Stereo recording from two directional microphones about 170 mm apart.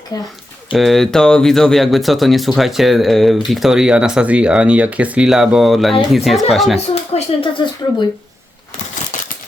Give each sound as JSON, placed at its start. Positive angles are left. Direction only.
{"t": 0.1, "sound": "speech", "side_deg": 25}
{"t": 0.7, "sound": "speech", "side_deg": 0}
{"t": 6.7, "sound": "speech", "side_deg": 35}
{"t": 9.1, "sound": "a sound", "side_deg": 50}